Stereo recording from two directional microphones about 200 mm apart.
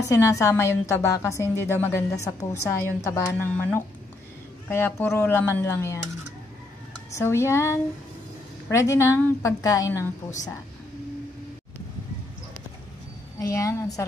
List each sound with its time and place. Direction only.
0.1 s a woman's voice: 15° left (ahead or behind)
7.1 s a woman's voice: 15° left (ahead or behind)
13.4 s a woman's voice: 15° left (ahead or behind)